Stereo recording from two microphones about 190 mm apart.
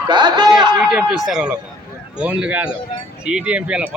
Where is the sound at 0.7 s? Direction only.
5° right (ahead or behind).